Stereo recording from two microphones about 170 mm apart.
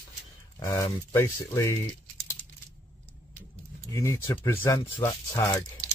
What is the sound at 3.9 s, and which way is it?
Speech, 15° left (ahead or behind).